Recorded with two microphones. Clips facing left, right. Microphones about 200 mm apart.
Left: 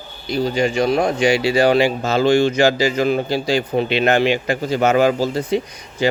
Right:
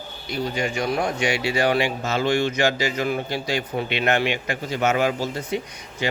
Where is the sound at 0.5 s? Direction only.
30° left (ahead or behind).